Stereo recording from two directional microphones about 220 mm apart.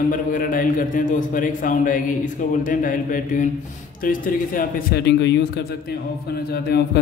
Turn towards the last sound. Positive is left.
turn(degrees=45)  # may be behind; listen again after turning